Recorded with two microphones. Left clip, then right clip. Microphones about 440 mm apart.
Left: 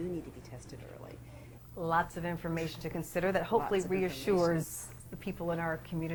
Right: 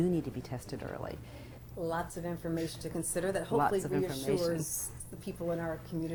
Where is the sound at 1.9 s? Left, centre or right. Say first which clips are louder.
Left 8 dB; left.